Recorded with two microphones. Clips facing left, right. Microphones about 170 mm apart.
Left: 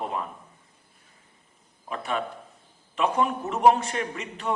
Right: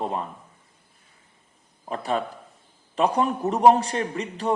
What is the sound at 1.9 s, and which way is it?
Speech, 35° right (ahead or behind).